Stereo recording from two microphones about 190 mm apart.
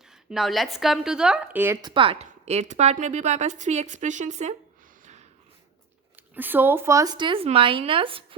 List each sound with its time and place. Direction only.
0.1 s speech: centre (ahead or behind)
1.8 s a woman's voice: 25° right (ahead or behind)
6.1 s speech: 10° right (ahead or behind); by 8.4 s 30° right (ahead or behind)